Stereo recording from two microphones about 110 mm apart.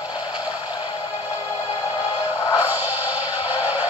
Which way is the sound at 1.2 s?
15° right (ahead or behind).